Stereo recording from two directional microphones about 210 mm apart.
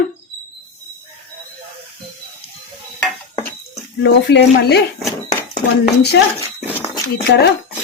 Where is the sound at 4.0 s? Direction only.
55° left (ahead or behind).